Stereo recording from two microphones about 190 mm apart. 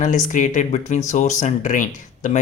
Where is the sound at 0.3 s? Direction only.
40° left (ahead or behind).